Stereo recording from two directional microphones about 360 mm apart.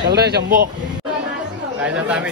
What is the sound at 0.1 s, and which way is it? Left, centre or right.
Speech, right.